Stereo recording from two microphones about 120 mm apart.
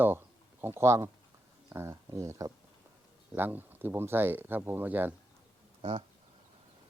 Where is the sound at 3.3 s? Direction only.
15° right (ahead or behind).